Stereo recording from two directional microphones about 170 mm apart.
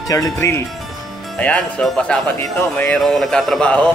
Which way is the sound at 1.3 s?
5° left (ahead or behind).